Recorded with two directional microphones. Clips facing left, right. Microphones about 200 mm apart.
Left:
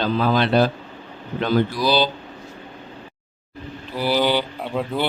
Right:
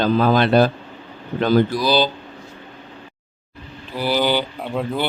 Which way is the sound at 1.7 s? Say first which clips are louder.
Right 1 dB; 45° right (ahead or behind).